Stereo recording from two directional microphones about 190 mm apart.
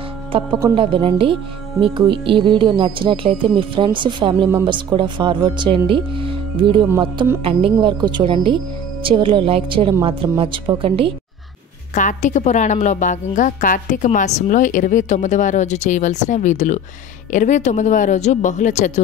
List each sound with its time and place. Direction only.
0.5 s speech: 15° right (ahead or behind)
0.7 s speech: 25° right (ahead or behind)
11.9 s a woman's voice: 40° left (ahead or behind)